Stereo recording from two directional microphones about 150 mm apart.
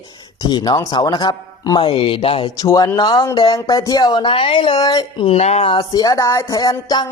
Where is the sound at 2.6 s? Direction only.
20° left (ahead or behind); by 5.8 s 45° left (ahead or behind).